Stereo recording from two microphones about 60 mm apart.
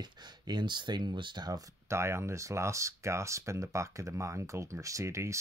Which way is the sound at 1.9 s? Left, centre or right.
Right.